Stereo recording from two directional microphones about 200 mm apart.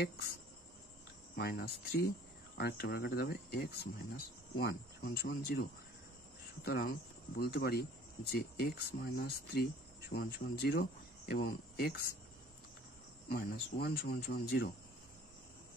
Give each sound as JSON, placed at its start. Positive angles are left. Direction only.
{"t": 1.3, "sound": "speech", "side_deg": 50}
{"t": 13.3, "sound": "speech", "side_deg": 50}